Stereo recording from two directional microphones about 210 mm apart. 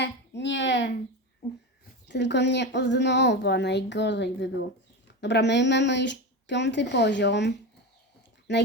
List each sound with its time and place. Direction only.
0.0 s speech: 55° left (ahead or behind)
2.0 s a woman's voice: 55° left (ahead or behind)